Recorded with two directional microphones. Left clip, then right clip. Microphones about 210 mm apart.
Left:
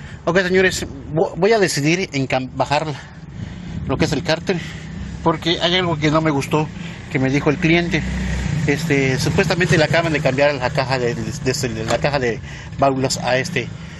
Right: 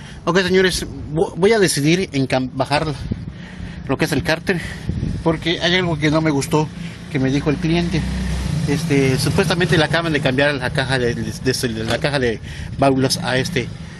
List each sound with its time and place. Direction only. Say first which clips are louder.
0.2 s a man's voice: even; 15° right (ahead or behind)
5.2 s speech: left 1 dB; 5° right (ahead or behind)
7.1 s speech: left 2 dB; centre (ahead or behind)
8.8 s speech: right 2 dB; 5° left (ahead or behind)
9.1 s speech: even; 15° right (ahead or behind)